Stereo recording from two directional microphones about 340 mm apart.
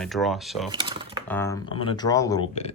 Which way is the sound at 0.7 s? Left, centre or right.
Centre.